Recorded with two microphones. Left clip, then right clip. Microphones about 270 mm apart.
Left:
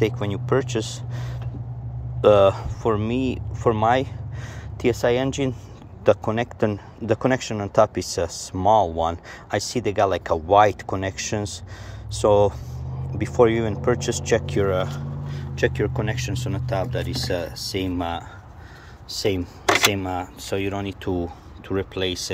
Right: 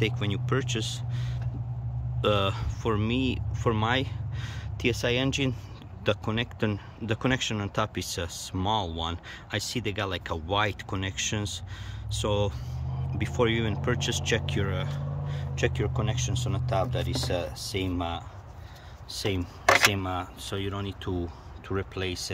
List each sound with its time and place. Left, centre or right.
0.2 s speech: centre
15.3 s vehicle: centre
16.0 s speech: centre